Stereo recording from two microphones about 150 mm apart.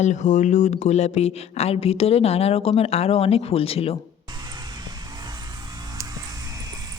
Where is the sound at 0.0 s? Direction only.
55° left (ahead or behind).